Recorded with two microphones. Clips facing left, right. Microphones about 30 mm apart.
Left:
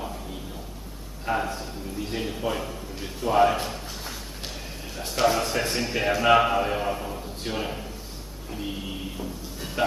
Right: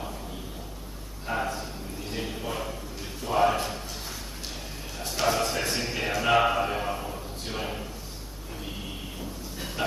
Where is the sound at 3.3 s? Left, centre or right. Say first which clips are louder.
Left 3 dB; centre.